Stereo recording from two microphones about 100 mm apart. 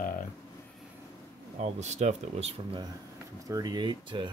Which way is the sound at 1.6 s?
90° right.